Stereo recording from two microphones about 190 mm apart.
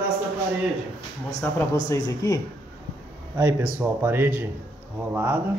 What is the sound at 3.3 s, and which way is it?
A man's voice, 15° right (ahead or behind).